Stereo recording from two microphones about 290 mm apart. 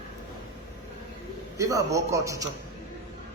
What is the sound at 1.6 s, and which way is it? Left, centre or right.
Speech, centre.